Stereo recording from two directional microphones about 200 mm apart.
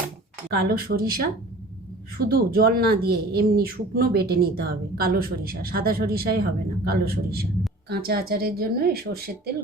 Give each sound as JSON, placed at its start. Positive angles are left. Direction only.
{"t": 0.6, "sound": "speech", "side_deg": -50}